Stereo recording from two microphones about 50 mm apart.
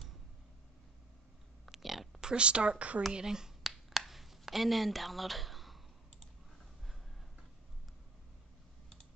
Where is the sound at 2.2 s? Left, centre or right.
Centre.